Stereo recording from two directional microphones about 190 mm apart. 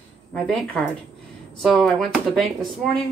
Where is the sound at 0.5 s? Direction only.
Centre (ahead or behind).